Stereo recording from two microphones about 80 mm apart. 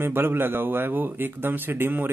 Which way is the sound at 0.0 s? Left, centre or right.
Right.